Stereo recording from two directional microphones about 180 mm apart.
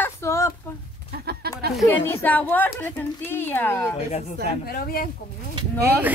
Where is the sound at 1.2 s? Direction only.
60° right (ahead or behind).